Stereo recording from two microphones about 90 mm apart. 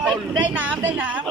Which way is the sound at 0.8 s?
15° right (ahead or behind).